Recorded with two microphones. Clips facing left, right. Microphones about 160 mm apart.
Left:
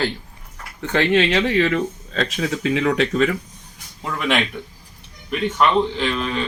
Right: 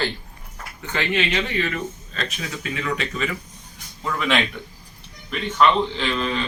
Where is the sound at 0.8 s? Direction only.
75° left (ahead or behind).